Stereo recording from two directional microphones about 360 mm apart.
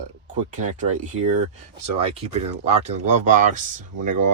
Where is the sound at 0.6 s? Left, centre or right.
Centre.